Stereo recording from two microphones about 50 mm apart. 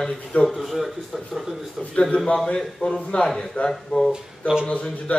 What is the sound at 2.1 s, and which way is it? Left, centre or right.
A man's voice, left.